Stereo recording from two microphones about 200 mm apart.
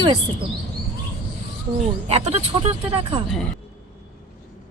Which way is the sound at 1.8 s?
30° right (ahead or behind).